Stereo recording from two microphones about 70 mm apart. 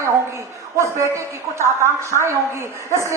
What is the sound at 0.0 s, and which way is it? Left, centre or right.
A woman's voice, right.